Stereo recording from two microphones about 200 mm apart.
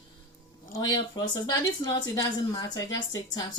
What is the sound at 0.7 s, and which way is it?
Speech, 20° left (ahead or behind).